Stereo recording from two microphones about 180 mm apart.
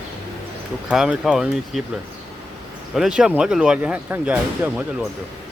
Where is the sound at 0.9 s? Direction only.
5° right (ahead or behind).